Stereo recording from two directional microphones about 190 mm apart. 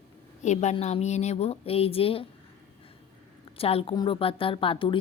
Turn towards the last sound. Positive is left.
turn(degrees=25)  # may be behind; listen again after turning